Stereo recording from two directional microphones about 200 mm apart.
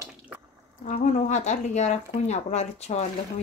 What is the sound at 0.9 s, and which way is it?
Speech, 35° left (ahead or behind).